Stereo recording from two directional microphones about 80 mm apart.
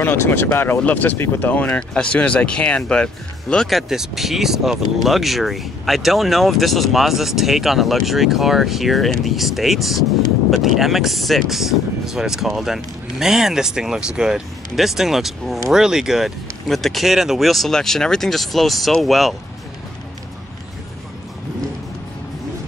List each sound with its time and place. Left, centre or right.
0.0 s speech: left; by 3.6 s centre
3.6 s speech: centre